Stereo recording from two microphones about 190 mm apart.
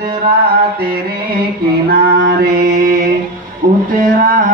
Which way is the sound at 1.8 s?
50° right (ahead or behind).